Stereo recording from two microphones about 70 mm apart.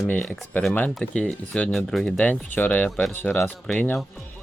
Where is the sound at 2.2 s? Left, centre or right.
Left.